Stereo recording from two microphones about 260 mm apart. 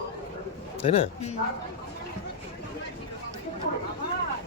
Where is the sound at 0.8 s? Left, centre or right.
Left.